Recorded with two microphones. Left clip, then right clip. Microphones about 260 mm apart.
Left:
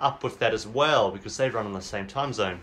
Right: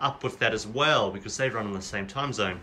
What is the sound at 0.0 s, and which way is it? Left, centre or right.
Speech, centre.